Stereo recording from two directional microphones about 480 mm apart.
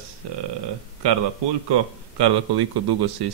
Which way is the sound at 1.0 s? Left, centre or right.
Right.